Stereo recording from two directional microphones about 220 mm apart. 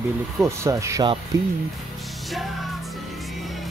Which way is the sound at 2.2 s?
Centre (ahead or behind).